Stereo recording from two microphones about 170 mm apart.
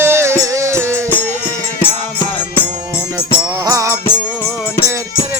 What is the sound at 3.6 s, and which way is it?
Music, 20° right (ahead or behind).